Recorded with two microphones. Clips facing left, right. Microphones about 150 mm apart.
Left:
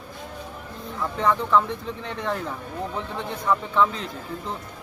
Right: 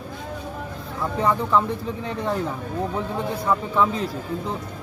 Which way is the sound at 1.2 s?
5° right (ahead or behind).